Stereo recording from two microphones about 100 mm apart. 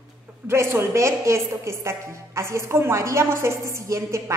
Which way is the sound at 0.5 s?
25° right (ahead or behind).